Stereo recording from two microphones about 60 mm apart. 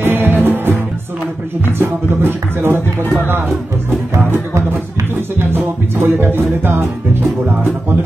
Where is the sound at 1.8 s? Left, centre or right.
Right.